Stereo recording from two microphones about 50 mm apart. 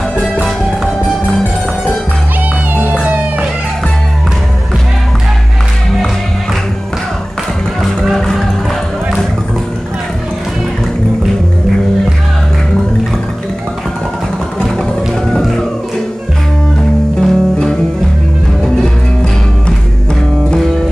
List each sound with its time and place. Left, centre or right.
2.9 s music: right
7.8 s music: centre
17.2 s music: centre